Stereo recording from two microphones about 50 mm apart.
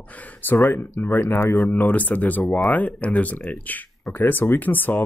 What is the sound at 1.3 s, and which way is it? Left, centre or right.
Speech, left.